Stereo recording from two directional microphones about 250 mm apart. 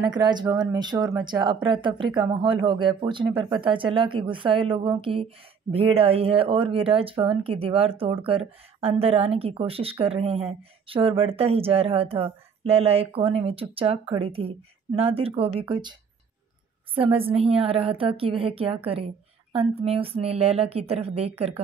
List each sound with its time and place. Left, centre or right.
0.0 s speech: centre